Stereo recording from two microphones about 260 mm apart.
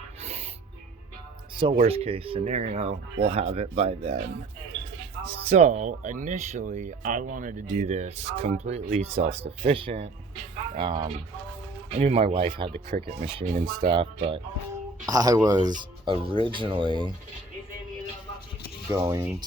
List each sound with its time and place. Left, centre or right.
0.2 s music: right
1.5 s speech: centre
5.2 s speech: right
18.9 s speech: centre